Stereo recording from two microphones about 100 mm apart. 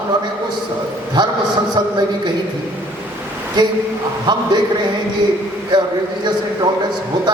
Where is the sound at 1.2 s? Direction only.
50° right (ahead or behind).